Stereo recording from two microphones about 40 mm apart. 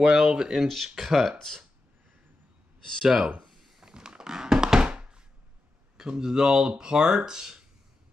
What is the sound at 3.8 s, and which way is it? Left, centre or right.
Thunk, right.